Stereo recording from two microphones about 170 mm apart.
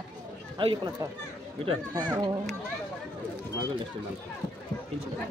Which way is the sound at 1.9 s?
20° right (ahead or behind).